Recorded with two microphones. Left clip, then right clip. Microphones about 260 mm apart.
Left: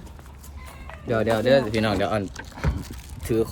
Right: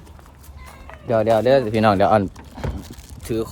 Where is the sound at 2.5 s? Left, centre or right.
Right.